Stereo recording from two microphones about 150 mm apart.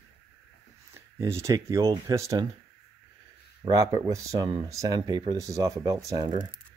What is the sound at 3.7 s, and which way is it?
Speech, 20° right (ahead or behind).